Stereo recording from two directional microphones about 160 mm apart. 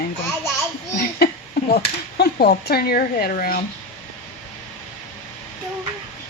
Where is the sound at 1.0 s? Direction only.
75° left (ahead or behind).